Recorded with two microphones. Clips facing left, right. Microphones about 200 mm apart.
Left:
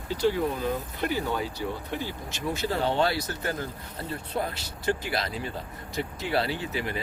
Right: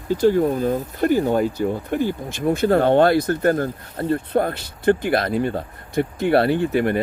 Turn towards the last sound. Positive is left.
turn(degrees=-55)  # may be behind; listen again after turning